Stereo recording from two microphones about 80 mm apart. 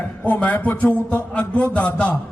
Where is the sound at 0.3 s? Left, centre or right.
Centre.